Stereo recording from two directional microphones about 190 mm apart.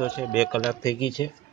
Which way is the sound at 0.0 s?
10° right (ahead or behind).